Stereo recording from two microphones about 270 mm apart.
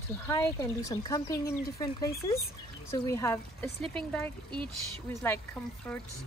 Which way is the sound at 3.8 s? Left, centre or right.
Right.